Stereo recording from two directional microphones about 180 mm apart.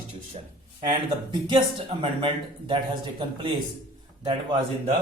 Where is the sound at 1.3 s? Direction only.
30° right (ahead or behind).